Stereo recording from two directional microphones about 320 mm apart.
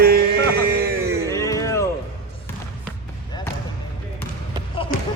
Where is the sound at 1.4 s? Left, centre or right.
Centre.